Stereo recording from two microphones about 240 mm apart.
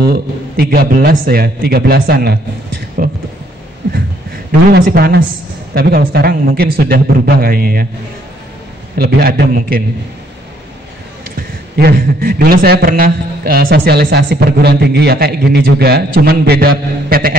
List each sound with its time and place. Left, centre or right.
0.0 s a man's voice: right
4.5 s a man's voice: right
8.9 s a man's voice: right
11.3 s a man's voice: right